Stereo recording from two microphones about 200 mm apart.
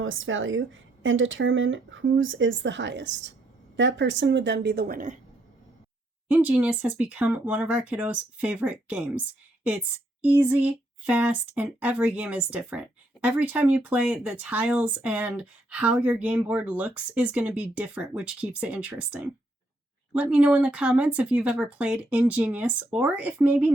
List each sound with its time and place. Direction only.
0.0 s a woman's voice: 75° right (ahead or behind); by 5.1 s 45° right (ahead or behind)
6.2 s speech: 10° right (ahead or behind)